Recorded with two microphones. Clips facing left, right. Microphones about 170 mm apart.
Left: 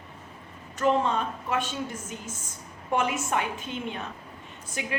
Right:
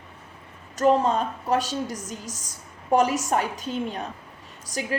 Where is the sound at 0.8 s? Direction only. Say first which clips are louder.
Right 4 dB; 40° right (ahead or behind).